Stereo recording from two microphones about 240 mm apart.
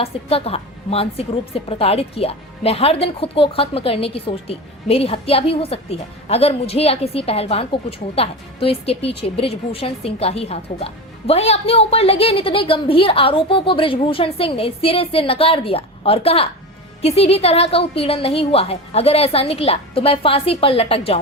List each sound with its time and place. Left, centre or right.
0.0 s a woman's voice: left